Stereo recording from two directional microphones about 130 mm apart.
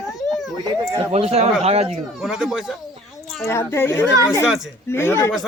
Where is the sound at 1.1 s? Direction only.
55° right (ahead or behind).